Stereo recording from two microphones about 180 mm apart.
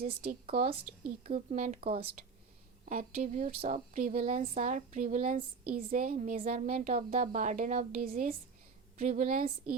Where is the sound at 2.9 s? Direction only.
50° right (ahead or behind).